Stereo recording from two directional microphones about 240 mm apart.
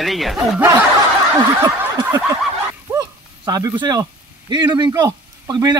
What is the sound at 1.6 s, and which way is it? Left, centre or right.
Snicker, centre.